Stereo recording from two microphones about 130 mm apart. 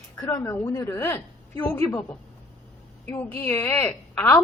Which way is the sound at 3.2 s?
15° left (ahead or behind).